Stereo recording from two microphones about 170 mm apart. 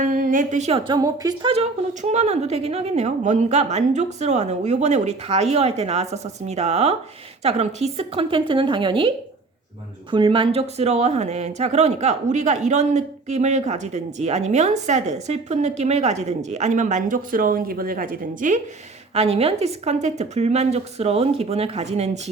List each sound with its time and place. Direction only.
0.0 s speech: 50° right (ahead or behind)
0.9 s speech: 20° right (ahead or behind)
1.9 s speech: 45° right (ahead or behind)
19.1 s speech: 35° right (ahead or behind)